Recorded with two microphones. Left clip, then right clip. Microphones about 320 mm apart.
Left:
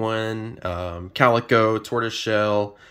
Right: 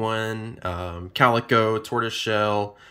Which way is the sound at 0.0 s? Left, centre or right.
Centre.